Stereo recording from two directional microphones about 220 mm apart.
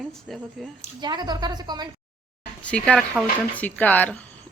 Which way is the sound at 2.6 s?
5° left (ahead or behind).